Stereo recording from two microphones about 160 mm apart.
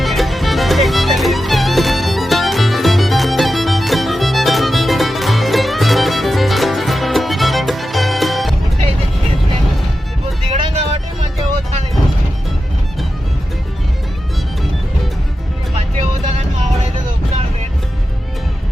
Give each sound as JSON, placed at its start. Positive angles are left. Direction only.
{"t": 0.0, "sound": "music", "side_deg": 0}
{"t": 10.5, "sound": "vehicle", "side_deg": -45}